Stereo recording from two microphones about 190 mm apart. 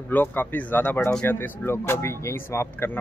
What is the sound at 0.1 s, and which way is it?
Speech, 10° left (ahead or behind).